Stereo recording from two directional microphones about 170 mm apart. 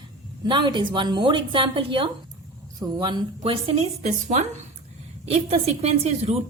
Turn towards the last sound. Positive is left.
turn(degrees=-40)  # may be behind; listen again after turning